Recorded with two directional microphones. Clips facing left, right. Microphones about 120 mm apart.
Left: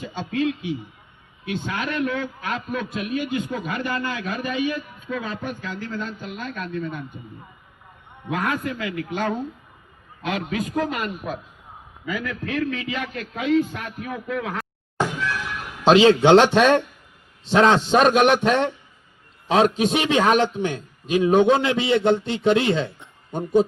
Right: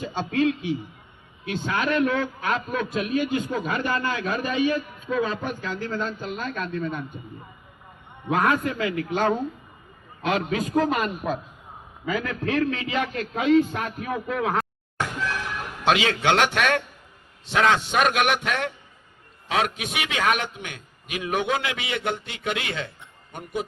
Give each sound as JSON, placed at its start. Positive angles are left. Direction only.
{"t": 0.0, "sound": "a sound", "side_deg": -35}
{"t": 0.3, "sound": "a man's voice", "side_deg": -35}
{"t": 8.3, "sound": "a man's voice", "side_deg": -35}
{"t": 15.8, "sound": "a man's voice", "side_deg": 25}